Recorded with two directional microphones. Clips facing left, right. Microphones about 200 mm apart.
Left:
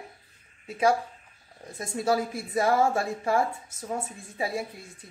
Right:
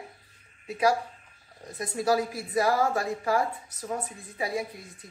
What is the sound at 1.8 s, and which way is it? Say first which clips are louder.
A woman's voice: even; 25° left (ahead or behind).